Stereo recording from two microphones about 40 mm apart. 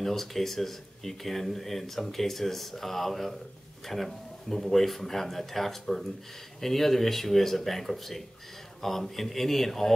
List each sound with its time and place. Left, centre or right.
0.0 s speech: centre